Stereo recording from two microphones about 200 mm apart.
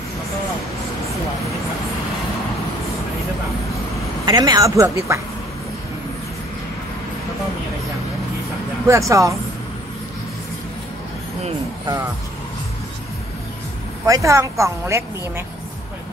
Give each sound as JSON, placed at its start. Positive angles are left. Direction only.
{"t": 4.3, "sound": "a woman's voice", "side_deg": -20}
{"t": 8.8, "sound": "a woman's voice", "side_deg": -15}
{"t": 14.0, "sound": "a woman's voice", "side_deg": -15}